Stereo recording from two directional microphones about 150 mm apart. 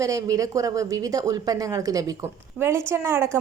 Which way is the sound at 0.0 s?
25° right (ahead or behind).